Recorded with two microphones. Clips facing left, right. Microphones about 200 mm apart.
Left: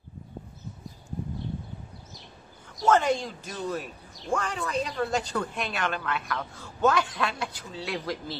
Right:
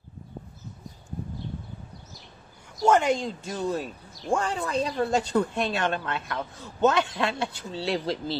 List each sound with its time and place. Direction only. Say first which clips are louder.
2.9 s speech: right 1 dB; 20° right (ahead or behind)